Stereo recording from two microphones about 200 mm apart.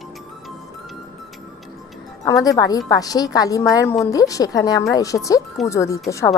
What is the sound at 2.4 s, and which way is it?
A woman's voice, 20° left (ahead or behind).